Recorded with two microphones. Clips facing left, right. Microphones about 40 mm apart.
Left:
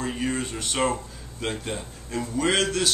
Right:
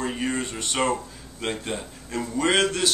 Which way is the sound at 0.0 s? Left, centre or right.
Centre.